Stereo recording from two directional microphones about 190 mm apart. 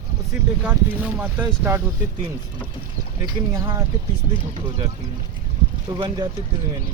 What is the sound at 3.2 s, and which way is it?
Speech, 15° right (ahead or behind).